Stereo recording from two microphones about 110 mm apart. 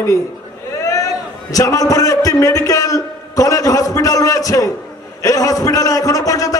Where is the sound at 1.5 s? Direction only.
30° left (ahead or behind).